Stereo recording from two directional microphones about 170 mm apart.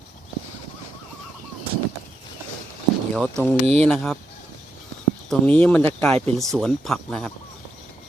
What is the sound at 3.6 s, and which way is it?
Speech, 35° right (ahead or behind).